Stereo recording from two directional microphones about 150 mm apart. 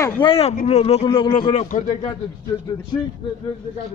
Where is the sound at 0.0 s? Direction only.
35° left (ahead or behind).